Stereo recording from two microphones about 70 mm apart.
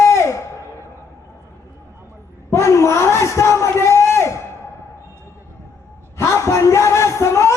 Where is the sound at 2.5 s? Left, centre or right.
Left.